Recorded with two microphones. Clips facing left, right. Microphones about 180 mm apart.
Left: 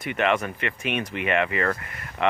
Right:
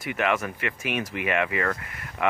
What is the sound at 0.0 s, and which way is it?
Speech, centre (ahead or behind).